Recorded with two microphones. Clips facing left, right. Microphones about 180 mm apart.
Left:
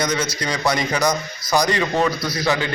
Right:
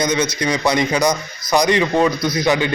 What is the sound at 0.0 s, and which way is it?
A man's voice, 20° right (ahead or behind).